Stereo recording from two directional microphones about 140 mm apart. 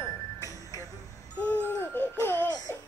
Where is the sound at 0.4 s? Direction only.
25° left (ahead or behind).